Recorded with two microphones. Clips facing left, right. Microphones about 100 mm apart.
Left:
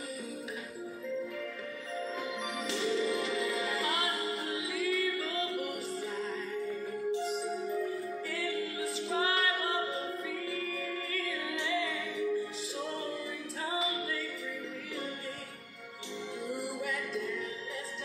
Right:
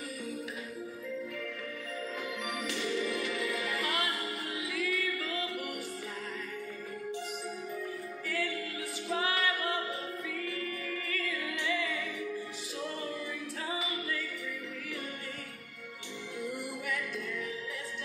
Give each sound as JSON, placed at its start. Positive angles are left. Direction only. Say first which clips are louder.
{"t": 2.6, "sound": "music", "louder": "left 3 dB", "side_deg": 25}
{"t": 7.2, "sound": "music", "louder": "left 5 dB", "side_deg": 25}
{"t": 13.7, "sound": "a capella", "louder": "left 3 dB", "side_deg": 30}
{"t": 16.9, "sound": "music", "louder": "left 1 dB", "side_deg": 30}